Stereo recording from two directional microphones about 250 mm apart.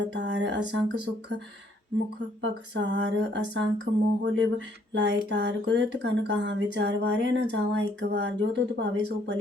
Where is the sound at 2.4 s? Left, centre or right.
Right.